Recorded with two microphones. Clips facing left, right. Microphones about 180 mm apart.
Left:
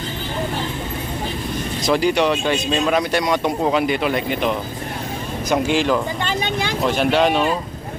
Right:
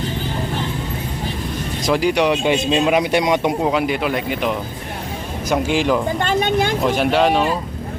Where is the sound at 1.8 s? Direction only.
5° right (ahead or behind).